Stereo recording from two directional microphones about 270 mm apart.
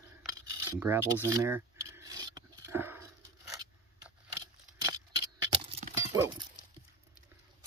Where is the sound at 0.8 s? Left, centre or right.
Centre.